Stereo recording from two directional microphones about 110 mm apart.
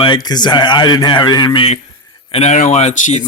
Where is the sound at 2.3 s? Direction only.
85° left.